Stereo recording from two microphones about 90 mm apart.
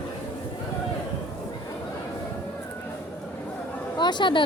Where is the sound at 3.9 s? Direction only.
55° left (ahead or behind).